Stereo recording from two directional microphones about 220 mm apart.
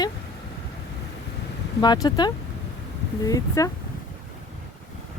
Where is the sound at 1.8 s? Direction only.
20° left (ahead or behind).